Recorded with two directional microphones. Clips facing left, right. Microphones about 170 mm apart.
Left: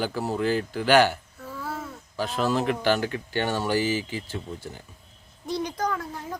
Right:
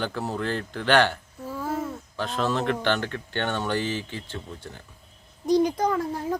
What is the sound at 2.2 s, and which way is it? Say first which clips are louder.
Speech: left 1 dB; 5° left (ahead or behind).